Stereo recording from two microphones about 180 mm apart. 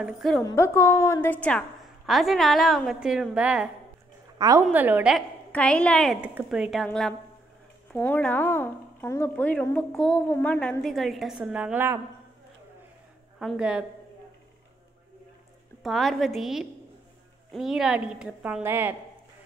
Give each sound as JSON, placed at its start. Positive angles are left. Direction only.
{"t": 0.0, "sound": "a woman's voice", "side_deg": 0}
{"t": 0.4, "sound": "a woman's voice", "side_deg": 15}
{"t": 4.4, "sound": "a woman's voice", "side_deg": -20}
{"t": 5.5, "sound": "a woman's voice", "side_deg": 5}
{"t": 6.2, "sound": "a woman's voice", "side_deg": -5}
{"t": 13.4, "sound": "a woman's voice", "side_deg": -5}
{"t": 15.8, "sound": "a woman's voice", "side_deg": 0}